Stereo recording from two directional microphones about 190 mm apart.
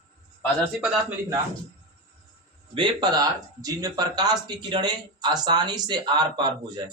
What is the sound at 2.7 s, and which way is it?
Speech, 25° right (ahead or behind).